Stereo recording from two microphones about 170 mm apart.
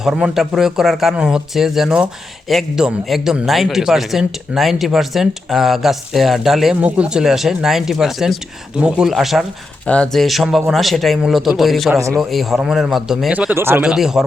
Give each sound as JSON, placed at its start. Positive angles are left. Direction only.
{"t": 0.0, "sound": "a man's voice", "side_deg": -5}
{"t": 11.9, "sound": "a man's voice", "side_deg": -20}
{"t": 12.2, "sound": "a man's voice", "side_deg": 0}